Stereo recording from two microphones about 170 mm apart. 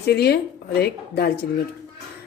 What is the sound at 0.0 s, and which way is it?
A woman's voice, 70° left (ahead or behind).